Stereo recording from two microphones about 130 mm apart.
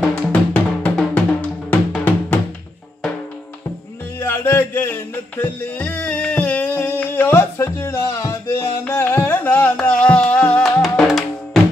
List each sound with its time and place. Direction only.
0.1 s drum: 10° left (ahead or behind)
2.0 s music: 15° left (ahead or behind)
4.2 s music: 20° left (ahead or behind)
10.6 s music: centre (ahead or behind)